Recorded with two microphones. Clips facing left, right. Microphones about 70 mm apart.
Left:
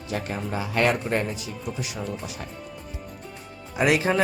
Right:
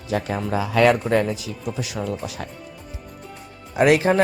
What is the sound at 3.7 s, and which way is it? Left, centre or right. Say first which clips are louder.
Speech: right 5 dB; right.